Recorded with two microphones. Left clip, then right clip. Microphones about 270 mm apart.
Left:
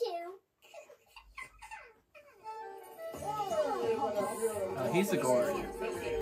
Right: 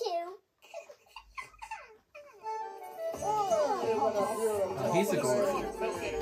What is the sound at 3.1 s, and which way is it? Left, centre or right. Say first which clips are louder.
Music: right 6 dB; centre.